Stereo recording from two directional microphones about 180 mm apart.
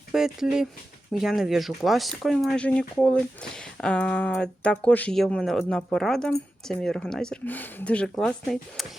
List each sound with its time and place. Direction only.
0.1 s speech: 5° right (ahead or behind)